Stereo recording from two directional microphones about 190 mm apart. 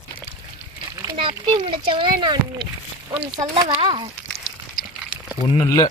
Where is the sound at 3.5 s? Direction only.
30° right (ahead or behind).